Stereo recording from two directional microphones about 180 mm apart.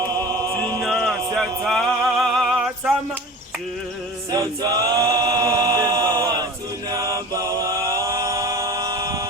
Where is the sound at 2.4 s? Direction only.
5° right (ahead or behind).